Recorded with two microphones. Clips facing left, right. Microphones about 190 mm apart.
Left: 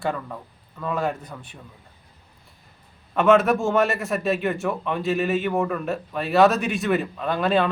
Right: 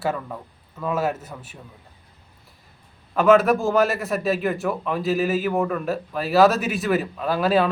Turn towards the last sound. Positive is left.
turn(degrees=-5)  # may be behind; listen again after turning